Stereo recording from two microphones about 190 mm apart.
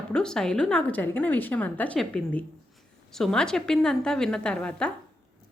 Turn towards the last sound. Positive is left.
turn(degrees=5)  # may be behind; listen again after turning